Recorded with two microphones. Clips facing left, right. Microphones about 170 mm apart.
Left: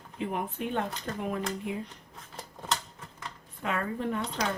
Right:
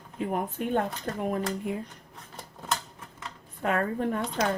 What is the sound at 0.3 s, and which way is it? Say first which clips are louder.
Speech: right 4 dB; 45° right (ahead or behind).